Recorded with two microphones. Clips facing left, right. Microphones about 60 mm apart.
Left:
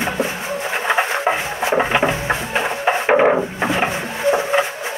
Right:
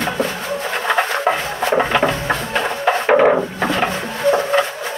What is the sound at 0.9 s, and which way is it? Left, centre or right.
Music, centre.